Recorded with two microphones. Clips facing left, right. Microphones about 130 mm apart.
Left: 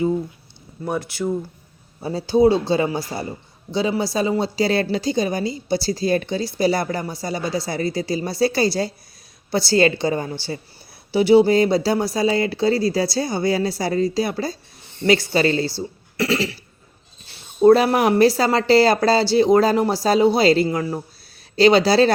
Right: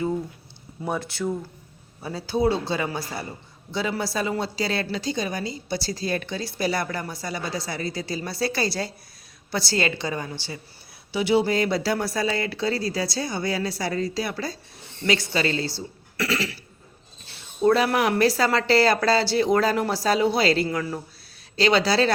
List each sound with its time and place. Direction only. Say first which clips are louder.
0.9 s speech: left 3 dB; 5° left (ahead or behind)
2.0 s a woman's voice: left 8 dB; 30° left (ahead or behind)
16.1 s a sound: left 5 dB; 30° left (ahead or behind)
17.6 s a woman's voice: left 6 dB; 30° left (ahead or behind)